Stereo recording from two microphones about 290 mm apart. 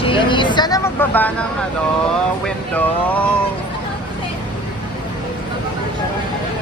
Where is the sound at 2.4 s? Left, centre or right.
Centre.